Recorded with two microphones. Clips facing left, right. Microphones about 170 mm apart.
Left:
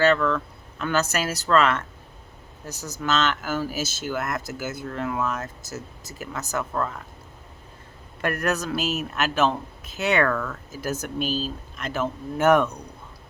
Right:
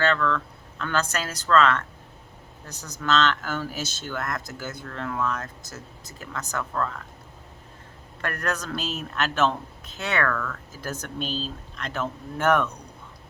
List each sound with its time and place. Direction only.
0.0 s speech: 10° left (ahead or behind)
3.0 s speech: 5° left (ahead or behind)
8.2 s speech: 10° left (ahead or behind)
10.0 s speech: 15° left (ahead or behind)
10.7 s speech: 10° left (ahead or behind)